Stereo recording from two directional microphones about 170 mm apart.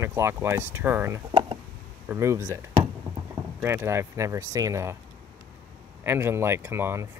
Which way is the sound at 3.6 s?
15° right (ahead or behind).